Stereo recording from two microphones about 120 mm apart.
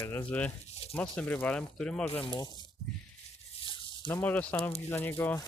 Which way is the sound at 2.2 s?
40° left (ahead or behind).